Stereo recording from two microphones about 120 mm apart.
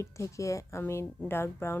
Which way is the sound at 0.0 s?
25° left (ahead or behind).